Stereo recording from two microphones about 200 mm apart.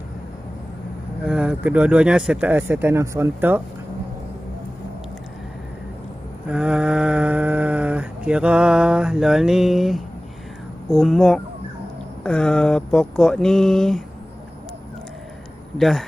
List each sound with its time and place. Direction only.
1.2 s speech: 5° right (ahead or behind)
6.5 s speech: 5° right (ahead or behind)
15.8 s speech: centre (ahead or behind)